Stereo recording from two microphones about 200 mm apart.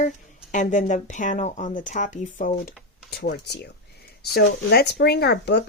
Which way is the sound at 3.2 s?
55° left (ahead or behind).